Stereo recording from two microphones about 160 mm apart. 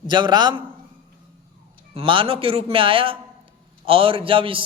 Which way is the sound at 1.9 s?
35° right (ahead or behind).